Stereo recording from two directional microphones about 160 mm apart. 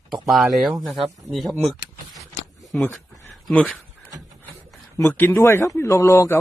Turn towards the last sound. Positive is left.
turn(degrees=15)  # may be behind; listen again after turning